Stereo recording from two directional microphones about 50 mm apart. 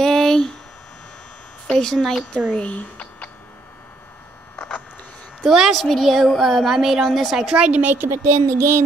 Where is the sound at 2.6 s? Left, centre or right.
Left.